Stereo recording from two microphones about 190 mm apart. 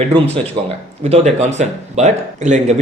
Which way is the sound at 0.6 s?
25° right (ahead or behind).